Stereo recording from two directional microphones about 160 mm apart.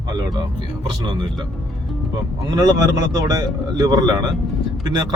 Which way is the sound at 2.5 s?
25° right (ahead or behind).